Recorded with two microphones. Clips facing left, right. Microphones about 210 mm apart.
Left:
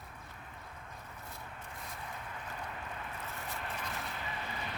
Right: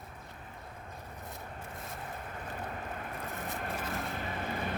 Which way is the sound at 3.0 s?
45° right (ahead or behind).